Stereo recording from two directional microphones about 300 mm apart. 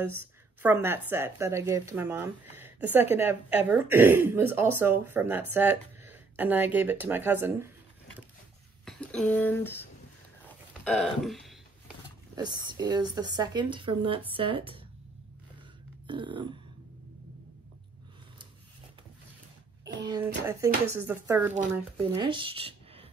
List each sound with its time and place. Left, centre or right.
0.6 s a woman's voice: centre
8.8 s speech: centre
10.8 s a sound: centre
12.4 s a woman's voice: centre
16.1 s a woman's voice: centre
20.1 s a woman's voice: centre
21.9 s speech: centre